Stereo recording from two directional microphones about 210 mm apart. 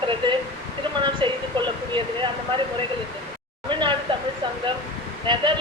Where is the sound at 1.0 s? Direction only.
20° right (ahead or behind).